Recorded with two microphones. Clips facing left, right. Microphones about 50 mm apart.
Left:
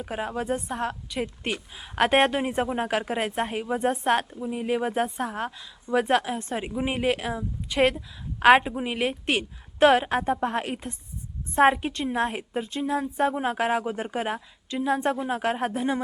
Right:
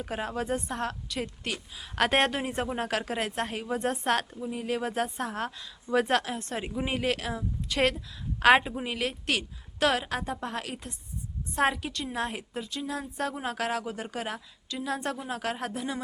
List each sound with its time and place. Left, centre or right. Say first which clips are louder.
0.0 s a woman's voice: left 2 dB; centre; by 1.9 s left
2.0 s a woman's voice: left 4 dB; centre; by 16.0 s left